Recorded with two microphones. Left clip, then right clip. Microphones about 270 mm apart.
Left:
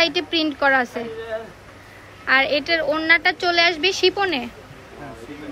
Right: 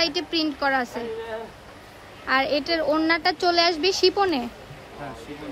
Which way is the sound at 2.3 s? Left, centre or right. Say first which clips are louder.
Left 4 dB; centre.